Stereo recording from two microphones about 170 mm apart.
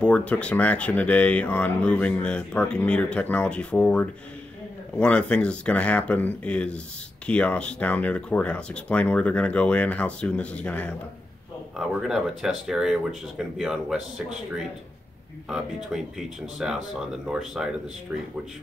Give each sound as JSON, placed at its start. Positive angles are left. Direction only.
{"t": 0.0, "sound": "speech", "side_deg": 5}
{"t": 12.1, "sound": "speech", "side_deg": 0}
{"t": 15.5, "sound": "speech", "side_deg": -5}